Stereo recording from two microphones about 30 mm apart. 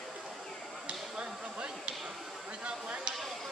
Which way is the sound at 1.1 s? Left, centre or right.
Right.